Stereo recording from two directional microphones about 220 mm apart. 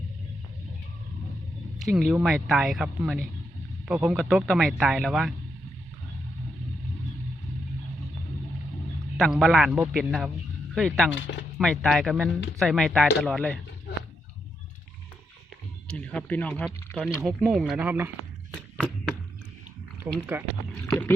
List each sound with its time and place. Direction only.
1.8 s speech: centre (ahead or behind)
9.1 s speech: centre (ahead or behind)
11.1 s speech: 55° left (ahead or behind)
11.5 s speech: 5° left (ahead or behind)
15.9 s speech: 5° left (ahead or behind)
20.1 s speech: 5° right (ahead or behind)